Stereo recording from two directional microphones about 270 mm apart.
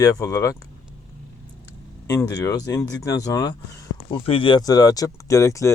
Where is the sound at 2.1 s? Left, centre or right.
Centre.